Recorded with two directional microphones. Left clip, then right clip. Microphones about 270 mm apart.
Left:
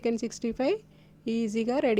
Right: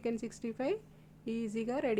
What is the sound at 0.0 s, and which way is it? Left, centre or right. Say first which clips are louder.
A woman's voice: left 8 dB; left.